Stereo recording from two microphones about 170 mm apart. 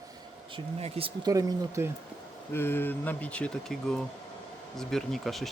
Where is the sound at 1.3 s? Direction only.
20° right (ahead or behind).